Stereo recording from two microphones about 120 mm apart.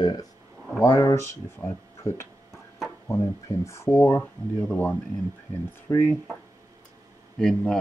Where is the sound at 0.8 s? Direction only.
25° left (ahead or behind).